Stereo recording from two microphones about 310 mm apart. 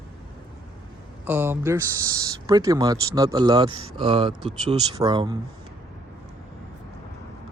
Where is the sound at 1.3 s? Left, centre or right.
Centre.